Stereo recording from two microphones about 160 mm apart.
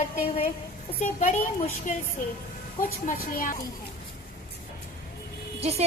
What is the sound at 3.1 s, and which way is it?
Speech, 60° left (ahead or behind).